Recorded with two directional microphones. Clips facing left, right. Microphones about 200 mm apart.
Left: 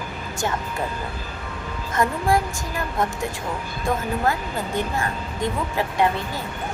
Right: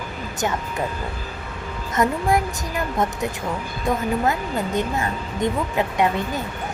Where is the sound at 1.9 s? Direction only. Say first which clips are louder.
Right 1 dB; 20° right (ahead or behind).